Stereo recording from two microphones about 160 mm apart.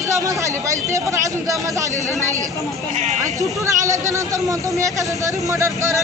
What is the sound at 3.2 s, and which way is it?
Speech, 20° right (ahead or behind).